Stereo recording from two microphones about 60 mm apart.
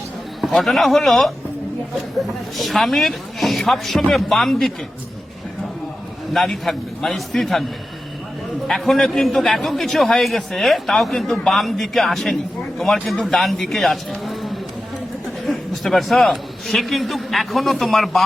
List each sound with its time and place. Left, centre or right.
0.4 s a man's voice: centre
2.6 s a man's voice: centre
6.3 s a man's voice: centre
8.6 s a man's voice: centre